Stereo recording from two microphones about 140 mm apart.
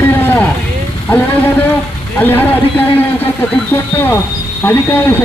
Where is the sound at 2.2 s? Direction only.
15° left (ahead or behind).